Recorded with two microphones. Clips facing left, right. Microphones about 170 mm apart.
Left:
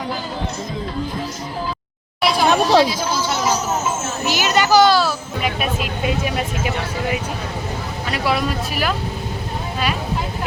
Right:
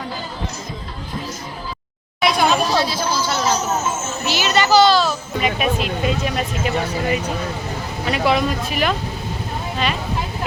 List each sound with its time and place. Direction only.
2.2 s a sound: centre (ahead or behind)
2.5 s chatter: 75° left (ahead or behind)
2.8 s a woman's voice: 15° left (ahead or behind)